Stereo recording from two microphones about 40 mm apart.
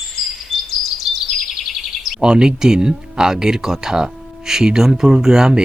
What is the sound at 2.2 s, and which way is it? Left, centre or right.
Speech, centre.